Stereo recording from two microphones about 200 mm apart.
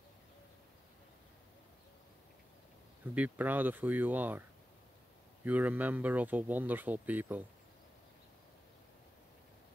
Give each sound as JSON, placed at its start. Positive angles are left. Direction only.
{"t": 3.2, "sound": "speech", "side_deg": -10}